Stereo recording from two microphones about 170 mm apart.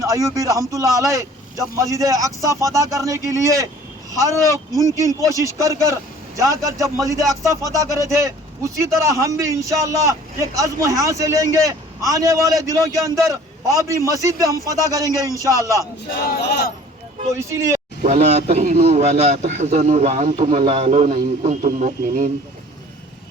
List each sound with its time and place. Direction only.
0.0 s a man's voice: 20° right (ahead or behind)
16.2 s speech: 75° left (ahead or behind)
17.3 s speech: 15° right (ahead or behind)
18.0 s speech: 40° right (ahead or behind)
20.7 s a man's voice: 35° right (ahead or behind)